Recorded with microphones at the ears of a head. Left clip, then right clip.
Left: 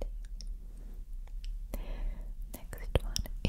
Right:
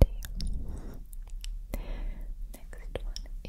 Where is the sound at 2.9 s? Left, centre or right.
Left.